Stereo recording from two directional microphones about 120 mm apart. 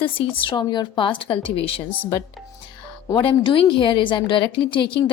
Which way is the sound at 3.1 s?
45° left (ahead or behind).